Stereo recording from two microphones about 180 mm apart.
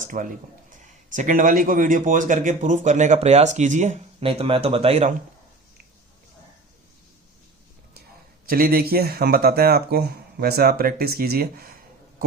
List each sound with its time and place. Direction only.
0.0 s speech: 45° right (ahead or behind)
8.4 s speech: 55° right (ahead or behind)